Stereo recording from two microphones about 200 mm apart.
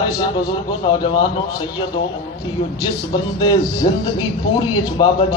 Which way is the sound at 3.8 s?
25° left (ahead or behind).